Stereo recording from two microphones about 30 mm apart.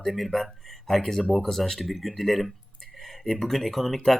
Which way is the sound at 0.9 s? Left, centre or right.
Centre.